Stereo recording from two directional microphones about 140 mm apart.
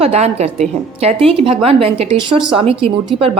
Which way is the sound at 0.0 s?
50° right (ahead or behind).